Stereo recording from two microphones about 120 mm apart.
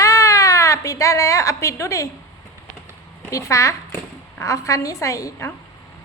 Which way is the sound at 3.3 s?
25° left (ahead or behind).